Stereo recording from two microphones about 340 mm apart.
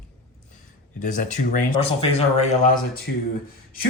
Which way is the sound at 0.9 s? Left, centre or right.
Left.